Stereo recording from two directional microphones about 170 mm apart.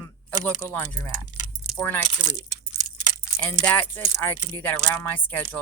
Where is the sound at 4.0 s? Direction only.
20° left (ahead or behind).